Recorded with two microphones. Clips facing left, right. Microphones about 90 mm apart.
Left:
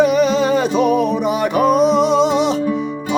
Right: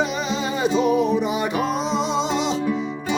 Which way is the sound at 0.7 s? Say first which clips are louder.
Left 3 dB; 65° left (ahead or behind).